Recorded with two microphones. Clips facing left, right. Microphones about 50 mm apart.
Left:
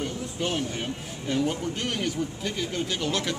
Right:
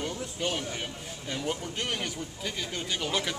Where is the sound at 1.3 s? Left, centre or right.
Centre.